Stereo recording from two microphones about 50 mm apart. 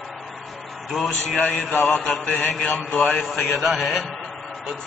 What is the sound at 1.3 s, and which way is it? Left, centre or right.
A man's voice, centre.